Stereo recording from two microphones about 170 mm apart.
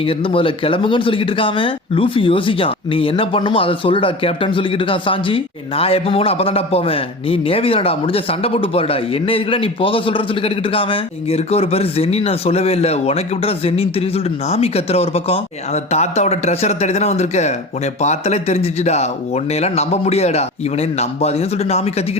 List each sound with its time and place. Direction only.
0.0 s speech: 30° left (ahead or behind)